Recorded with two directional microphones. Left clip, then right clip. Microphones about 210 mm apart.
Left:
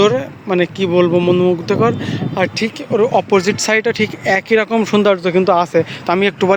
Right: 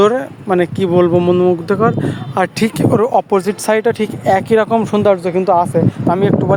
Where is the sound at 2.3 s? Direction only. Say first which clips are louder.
Right 2 dB; 20° right (ahead or behind).